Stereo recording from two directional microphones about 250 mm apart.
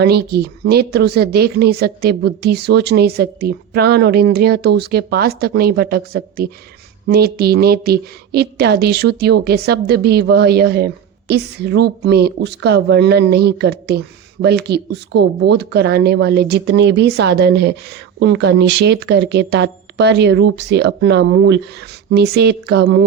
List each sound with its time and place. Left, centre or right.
0.0 s a woman's voice: right